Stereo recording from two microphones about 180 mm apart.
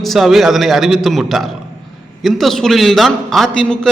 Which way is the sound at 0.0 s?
Centre (ahead or behind).